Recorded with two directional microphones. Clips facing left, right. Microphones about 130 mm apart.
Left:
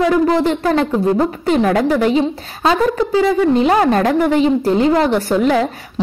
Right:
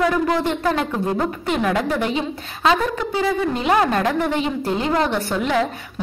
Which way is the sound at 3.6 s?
30° left (ahead or behind).